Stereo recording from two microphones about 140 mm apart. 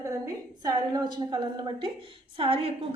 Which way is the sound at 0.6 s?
30° right (ahead or behind).